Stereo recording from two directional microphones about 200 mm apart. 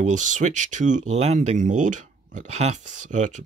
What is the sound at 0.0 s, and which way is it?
Speech, 40° right (ahead or behind).